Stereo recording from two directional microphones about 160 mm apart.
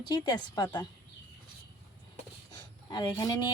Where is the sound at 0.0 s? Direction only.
25° left (ahead or behind).